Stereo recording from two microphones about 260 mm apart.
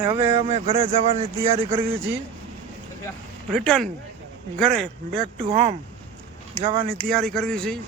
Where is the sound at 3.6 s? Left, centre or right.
Centre.